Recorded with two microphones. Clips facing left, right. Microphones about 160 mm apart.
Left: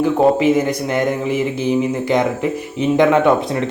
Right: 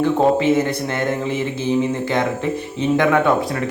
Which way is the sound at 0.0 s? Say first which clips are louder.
Left 2 dB; 10° left (ahead or behind).